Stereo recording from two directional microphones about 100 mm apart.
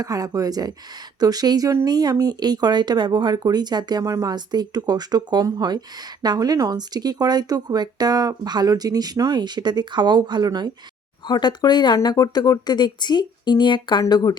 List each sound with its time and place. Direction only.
0.0 s speech: 35° right (ahead or behind)
11.3 s speech: 45° left (ahead or behind)